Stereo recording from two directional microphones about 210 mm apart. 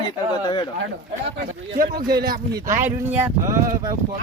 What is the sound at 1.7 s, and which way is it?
Speech, 40° right (ahead or behind).